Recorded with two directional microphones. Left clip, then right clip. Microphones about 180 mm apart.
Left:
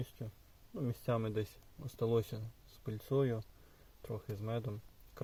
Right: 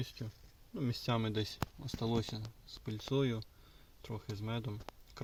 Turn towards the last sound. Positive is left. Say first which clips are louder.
# left 1 dB
turn(degrees=-15)  # may be behind; listen again after turning